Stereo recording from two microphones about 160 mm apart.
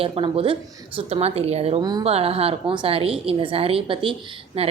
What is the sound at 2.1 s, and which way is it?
A woman's voice, 40° right (ahead or behind).